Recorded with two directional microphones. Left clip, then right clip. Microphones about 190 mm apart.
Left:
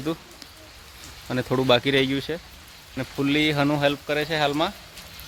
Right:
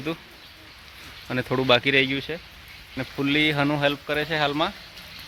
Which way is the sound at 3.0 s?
Centre (ahead or behind).